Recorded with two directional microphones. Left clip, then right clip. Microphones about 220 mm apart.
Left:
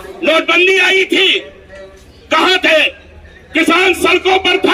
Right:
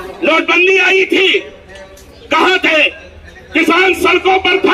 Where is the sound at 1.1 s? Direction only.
35° left (ahead or behind).